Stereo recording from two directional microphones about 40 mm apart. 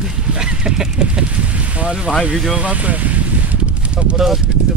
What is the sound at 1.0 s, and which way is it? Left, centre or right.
Speech, right.